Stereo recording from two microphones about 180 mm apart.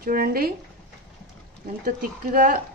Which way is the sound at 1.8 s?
55° right (ahead or behind).